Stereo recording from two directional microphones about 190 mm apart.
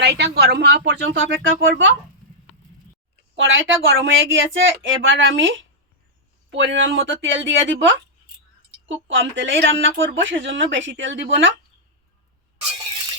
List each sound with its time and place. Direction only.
0.0 s speech: 60° right (ahead or behind); by 2.0 s 75° right (ahead or behind)
3.3 s a woman's voice: 85° right